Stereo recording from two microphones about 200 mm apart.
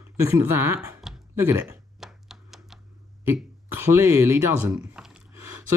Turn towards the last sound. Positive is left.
turn(degrees=-10)  # may be behind; listen again after turning